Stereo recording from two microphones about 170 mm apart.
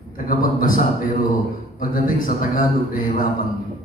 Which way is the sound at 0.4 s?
55° left (ahead or behind).